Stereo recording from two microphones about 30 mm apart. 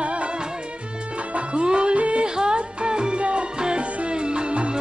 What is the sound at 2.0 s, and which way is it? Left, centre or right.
Music, right.